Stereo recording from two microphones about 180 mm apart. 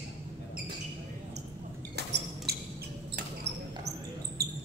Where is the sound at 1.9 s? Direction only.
65° right (ahead or behind).